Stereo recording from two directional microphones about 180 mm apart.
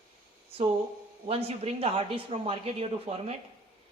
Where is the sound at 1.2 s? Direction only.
35° right (ahead or behind).